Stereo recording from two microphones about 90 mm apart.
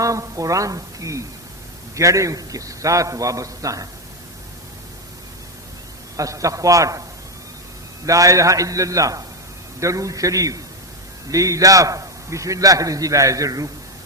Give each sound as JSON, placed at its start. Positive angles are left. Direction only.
{"t": 0.0, "sound": "a woman's voice", "side_deg": -40}
{"t": 6.1, "sound": "a man's voice", "side_deg": -40}
{"t": 8.0, "sound": "a man's voice", "side_deg": -40}